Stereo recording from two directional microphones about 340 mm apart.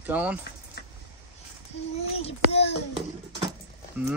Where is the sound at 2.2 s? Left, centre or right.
Centre.